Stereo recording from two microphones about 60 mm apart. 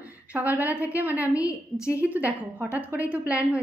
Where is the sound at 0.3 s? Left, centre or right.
Right.